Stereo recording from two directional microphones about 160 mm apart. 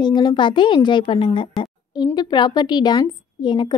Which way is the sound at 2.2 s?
25° left (ahead or behind).